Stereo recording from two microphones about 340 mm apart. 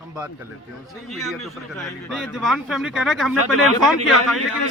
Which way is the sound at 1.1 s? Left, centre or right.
Centre.